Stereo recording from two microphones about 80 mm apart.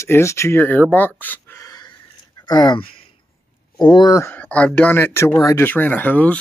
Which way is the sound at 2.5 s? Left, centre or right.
Left.